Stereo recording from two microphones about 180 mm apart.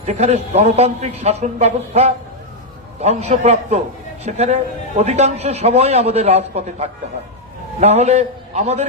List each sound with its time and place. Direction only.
0.0 s a man's voice: 35° right (ahead or behind)